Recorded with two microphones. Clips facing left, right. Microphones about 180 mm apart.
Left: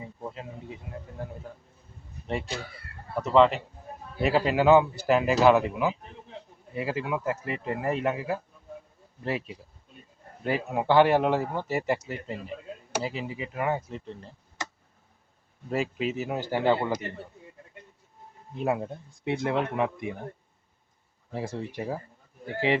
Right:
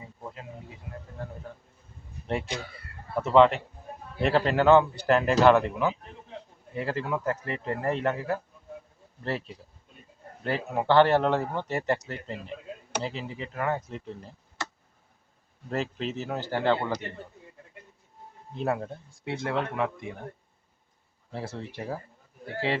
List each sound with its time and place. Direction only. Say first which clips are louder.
1.2 s speech: left 1 dB; 15° left (ahead or behind)
2.3 s a man's voice: right 1 dB; centre (ahead or behind)
13.9 s a man's voice: even; centre (ahead or behind)
15.7 s speech: left 2 dB; 10° left (ahead or behind)
18.5 s speech: left 1 dB; 15° left (ahead or behind)
21.3 s speech: left 3 dB; 15° left (ahead or behind)